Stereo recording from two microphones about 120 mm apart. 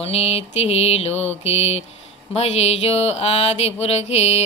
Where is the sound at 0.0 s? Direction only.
55° left (ahead or behind).